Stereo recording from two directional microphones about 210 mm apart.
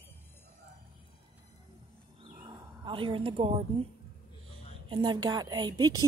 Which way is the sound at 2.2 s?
20° right (ahead or behind).